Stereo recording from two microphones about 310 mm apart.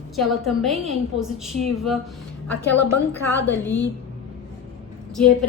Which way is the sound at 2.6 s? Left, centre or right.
Left.